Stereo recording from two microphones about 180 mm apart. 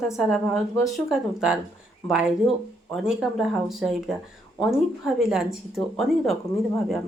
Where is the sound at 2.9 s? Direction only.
5° right (ahead or behind).